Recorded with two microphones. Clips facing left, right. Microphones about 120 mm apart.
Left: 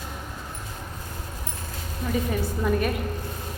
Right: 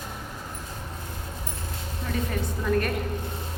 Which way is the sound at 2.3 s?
5° left (ahead or behind).